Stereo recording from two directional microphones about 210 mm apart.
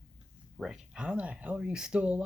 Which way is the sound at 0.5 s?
5° right (ahead or behind).